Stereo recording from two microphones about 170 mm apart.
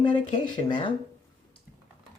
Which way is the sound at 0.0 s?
30° left (ahead or behind).